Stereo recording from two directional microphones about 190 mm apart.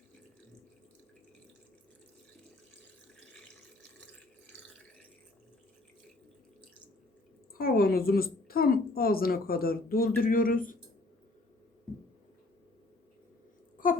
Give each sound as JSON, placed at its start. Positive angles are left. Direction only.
{"t": 7.5, "sound": "a woman's voice", "side_deg": 50}